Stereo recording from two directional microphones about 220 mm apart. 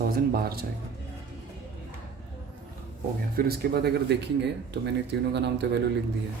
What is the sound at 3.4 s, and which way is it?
Speech, 45° right (ahead or behind).